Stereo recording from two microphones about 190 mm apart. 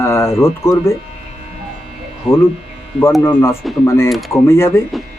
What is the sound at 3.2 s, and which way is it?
Speech, 15° left (ahead or behind).